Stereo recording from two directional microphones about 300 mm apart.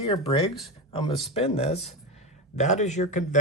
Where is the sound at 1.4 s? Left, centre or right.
Left.